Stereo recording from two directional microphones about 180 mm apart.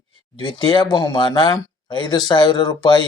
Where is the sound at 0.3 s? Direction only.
25° left (ahead or behind).